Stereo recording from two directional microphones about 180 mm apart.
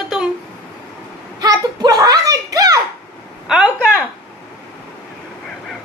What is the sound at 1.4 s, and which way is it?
A child's voice, 20° right (ahead or behind).